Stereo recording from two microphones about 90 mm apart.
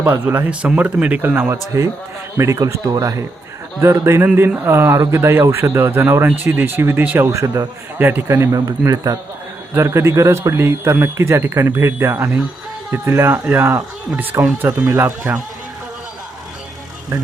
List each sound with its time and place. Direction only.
0.1 s speech: 30° right (ahead or behind)
0.6 s speech: 15° right (ahead or behind)
1.7 s speech: 35° right (ahead or behind)
7.9 s speech: 25° right (ahead or behind)